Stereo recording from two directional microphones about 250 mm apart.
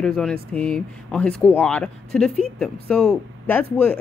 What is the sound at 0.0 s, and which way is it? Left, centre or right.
Speech, centre.